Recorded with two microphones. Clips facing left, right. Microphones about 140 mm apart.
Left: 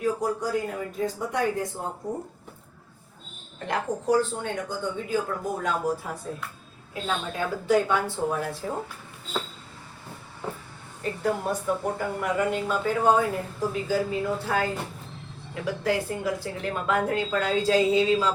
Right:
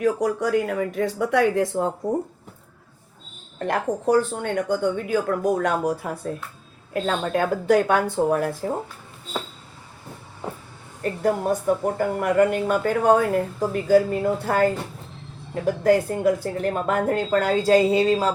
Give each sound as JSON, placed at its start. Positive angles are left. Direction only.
{"t": 0.0, "sound": "speech", "side_deg": -85}
{"t": 0.9, "sound": "speech", "side_deg": -85}
{"t": 3.6, "sound": "speech", "side_deg": -55}
{"t": 11.0, "sound": "a woman's voice", "side_deg": -50}